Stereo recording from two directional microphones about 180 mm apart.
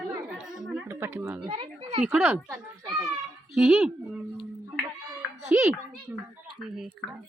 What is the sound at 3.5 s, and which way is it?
Speech, centre (ahead or behind).